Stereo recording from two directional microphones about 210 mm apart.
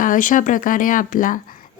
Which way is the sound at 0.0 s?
40° left (ahead or behind).